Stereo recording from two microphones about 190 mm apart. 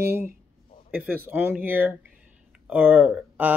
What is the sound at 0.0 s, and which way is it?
Speech, 10° right (ahead or behind).